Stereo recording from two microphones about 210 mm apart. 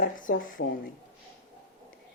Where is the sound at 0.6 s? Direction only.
50° left (ahead or behind).